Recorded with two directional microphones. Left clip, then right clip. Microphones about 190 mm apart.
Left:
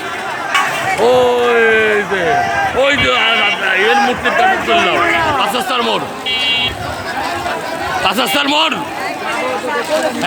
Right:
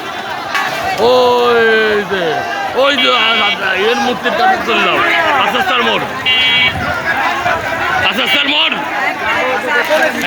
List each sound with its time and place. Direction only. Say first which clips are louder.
1.0 s a sound: right 2 dB; centre (ahead or behind)
3.2 s a man's voice: right 1 dB; 10° right (ahead or behind)
4.4 s a man's voice: even; centre (ahead or behind)
5.7 s speech: right 2 dB; 10° left (ahead or behind)
8.2 s speech: right 1 dB; 35° left (ahead or behind)